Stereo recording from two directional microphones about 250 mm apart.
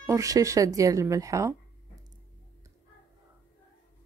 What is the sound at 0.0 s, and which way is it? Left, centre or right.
Speech, centre.